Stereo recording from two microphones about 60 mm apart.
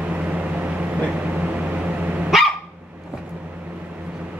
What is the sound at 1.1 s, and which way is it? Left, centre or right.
Dog, centre.